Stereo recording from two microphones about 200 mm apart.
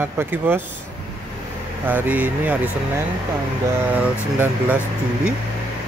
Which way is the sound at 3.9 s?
10° right (ahead or behind).